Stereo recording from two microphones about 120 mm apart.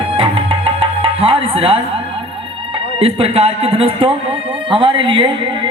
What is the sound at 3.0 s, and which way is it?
Speech, 55° right (ahead or behind).